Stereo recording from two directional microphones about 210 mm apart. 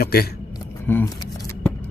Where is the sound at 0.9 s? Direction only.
10° left (ahead or behind).